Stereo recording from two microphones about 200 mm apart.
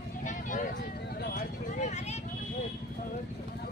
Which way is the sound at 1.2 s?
40° left (ahead or behind).